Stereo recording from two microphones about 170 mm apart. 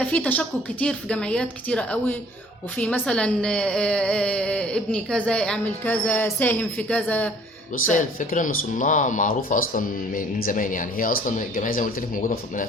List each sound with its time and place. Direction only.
0.0 s a woman's voice: 10° left (ahead or behind)
7.9 s speech: 50° left (ahead or behind)